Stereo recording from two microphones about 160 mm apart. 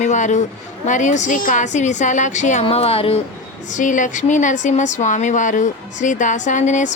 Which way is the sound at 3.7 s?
50° left (ahead or behind).